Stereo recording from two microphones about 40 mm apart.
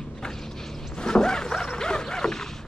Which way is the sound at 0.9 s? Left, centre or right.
Centre.